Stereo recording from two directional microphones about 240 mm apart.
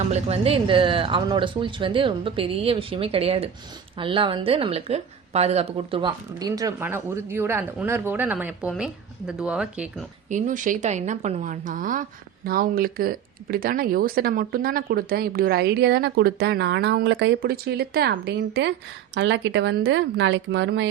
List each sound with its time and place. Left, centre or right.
0.1 s speech: right; by 10.1 s centre
10.2 s a woman's voice: right